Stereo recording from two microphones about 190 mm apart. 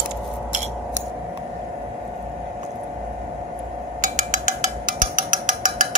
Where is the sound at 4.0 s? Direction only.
40° right (ahead or behind).